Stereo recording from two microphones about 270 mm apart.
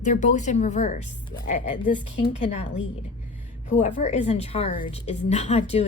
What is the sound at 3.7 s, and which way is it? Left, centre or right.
A woman's voice, left.